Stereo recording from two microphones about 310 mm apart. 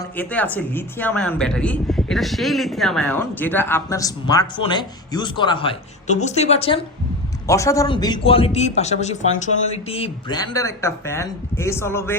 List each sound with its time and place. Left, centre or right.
0.0 s speech: centre